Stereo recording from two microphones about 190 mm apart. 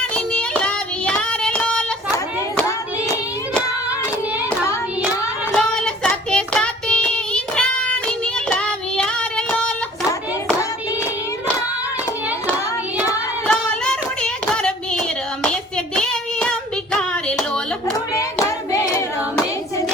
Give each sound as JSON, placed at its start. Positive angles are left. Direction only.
{"t": 0.3, "sound": "child singing", "side_deg": 5}
{"t": 5.5, "sound": "child singing", "side_deg": 5}
{"t": 13.5, "sound": "hands", "side_deg": 5}
{"t": 16.0, "sound": "child singing", "side_deg": 5}